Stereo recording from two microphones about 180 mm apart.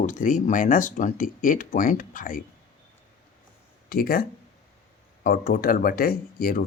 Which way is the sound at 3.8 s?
55° left (ahead or behind).